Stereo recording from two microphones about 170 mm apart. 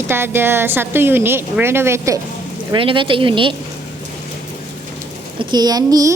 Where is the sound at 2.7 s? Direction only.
30° right (ahead or behind).